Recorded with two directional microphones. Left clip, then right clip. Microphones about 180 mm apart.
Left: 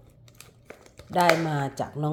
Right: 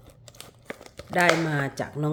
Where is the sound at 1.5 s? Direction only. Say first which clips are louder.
Right 1 dB; centre (ahead or behind).